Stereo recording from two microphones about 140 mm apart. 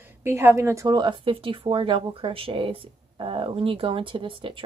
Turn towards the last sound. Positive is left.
turn(degrees=-40)  # may be behind; listen again after turning